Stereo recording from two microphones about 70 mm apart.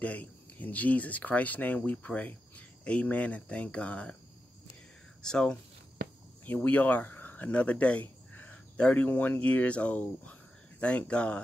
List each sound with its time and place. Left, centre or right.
0.0 s speech: left
5.2 s speech: centre
6.4 s speech: left